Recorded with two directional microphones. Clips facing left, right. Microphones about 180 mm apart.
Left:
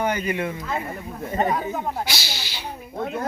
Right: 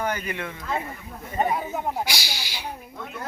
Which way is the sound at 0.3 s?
15° left (ahead or behind).